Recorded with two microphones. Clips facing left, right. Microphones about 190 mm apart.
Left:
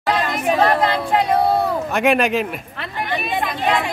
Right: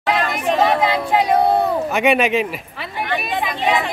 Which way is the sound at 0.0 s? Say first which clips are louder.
Even; centre (ahead or behind).